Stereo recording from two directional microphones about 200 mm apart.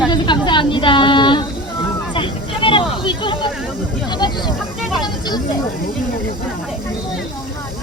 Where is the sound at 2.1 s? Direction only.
25° left (ahead or behind).